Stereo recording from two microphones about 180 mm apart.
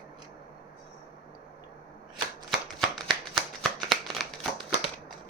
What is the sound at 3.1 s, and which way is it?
Shuffling cards, centre (ahead or behind).